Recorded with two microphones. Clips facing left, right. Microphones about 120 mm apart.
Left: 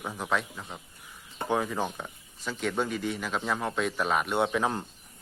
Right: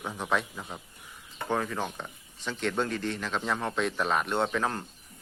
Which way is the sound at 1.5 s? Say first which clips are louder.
Left 2 dB; 10° left (ahead or behind).